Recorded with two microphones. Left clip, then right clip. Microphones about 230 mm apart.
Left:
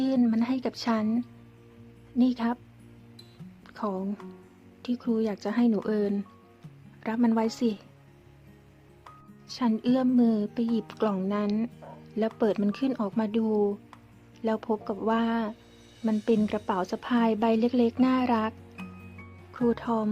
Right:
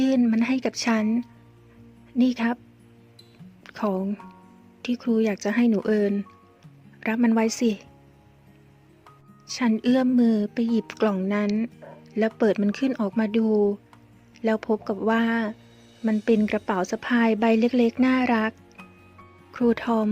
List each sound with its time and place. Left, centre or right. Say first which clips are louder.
0.0 s a woman's voice: right 4 dB; right
3.6 s a woman's voice: right 5 dB; right
9.5 s a woman's voice: right 4 dB; right
19.5 s a woman's voice: right 4 dB; right